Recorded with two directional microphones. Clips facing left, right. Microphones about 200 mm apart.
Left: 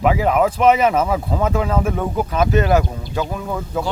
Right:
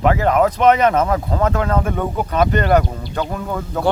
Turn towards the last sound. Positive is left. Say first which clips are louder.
# even
turn(degrees=5)  # may be behind; listen again after turning